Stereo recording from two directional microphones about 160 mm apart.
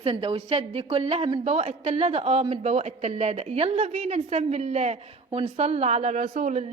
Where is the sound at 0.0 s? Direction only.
35° right (ahead or behind).